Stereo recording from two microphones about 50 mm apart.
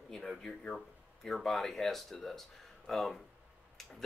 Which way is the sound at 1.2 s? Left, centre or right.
Centre.